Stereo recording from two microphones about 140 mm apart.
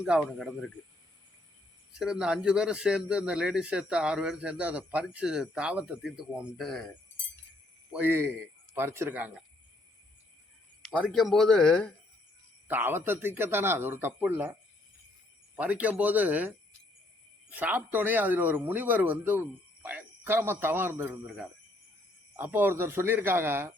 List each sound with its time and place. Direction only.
0.0 s speech: 5° right (ahead or behind)
1.9 s speech: 5° right (ahead or behind)
7.9 s speech: 15° right (ahead or behind)
10.9 s speech: 5° right (ahead or behind)
12.6 s speech: 15° right (ahead or behind)
15.5 s speech: 10° right (ahead or behind)
22.4 s speech: 15° right (ahead or behind)